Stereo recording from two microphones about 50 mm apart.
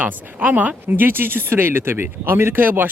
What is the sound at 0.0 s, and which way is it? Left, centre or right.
Speech, right.